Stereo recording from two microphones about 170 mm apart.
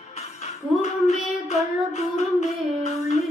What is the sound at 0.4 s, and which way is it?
Child singing, 40° left (ahead or behind).